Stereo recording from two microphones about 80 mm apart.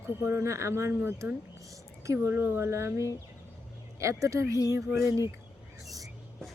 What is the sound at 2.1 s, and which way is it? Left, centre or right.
Speech, right.